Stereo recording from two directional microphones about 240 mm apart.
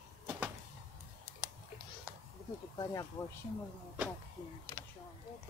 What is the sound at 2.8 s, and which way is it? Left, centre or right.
Speech, centre.